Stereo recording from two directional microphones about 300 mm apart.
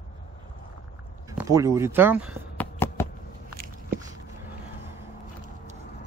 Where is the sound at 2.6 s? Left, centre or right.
Centre.